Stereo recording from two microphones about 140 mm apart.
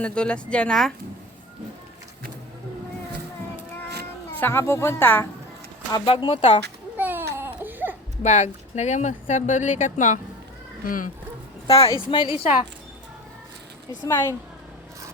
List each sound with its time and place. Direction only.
0.0 s speech: 5° left (ahead or behind)
4.4 s speech: 15° left (ahead or behind)
6.1 s a woman's voice: 35° left (ahead or behind)
6.9 s baby cry: 15° right (ahead or behind)
8.2 s speech: 55° left (ahead or behind)
10.8 s speech: 75° left (ahead or behind)
11.7 s a woman's voice: 40° left (ahead or behind)
14.1 s a woman's voice: 20° left (ahead or behind)